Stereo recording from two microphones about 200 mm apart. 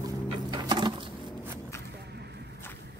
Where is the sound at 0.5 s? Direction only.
20° right (ahead or behind).